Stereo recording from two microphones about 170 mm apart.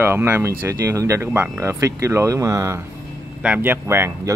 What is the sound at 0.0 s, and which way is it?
Speech, 15° right (ahead or behind).